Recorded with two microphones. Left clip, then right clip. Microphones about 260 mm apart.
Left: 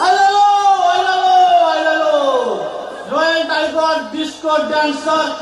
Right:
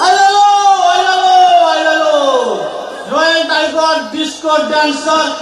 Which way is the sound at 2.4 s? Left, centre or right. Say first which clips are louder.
Right 3 dB; left.